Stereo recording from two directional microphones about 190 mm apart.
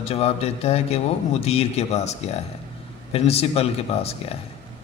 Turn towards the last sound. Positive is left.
turn(degrees=30)  # may be behind; listen again after turning